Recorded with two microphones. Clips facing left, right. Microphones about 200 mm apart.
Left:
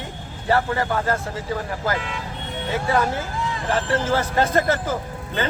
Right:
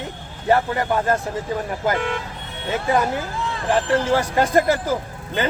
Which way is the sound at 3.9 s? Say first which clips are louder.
Right 1 dB; 15° right (ahead or behind).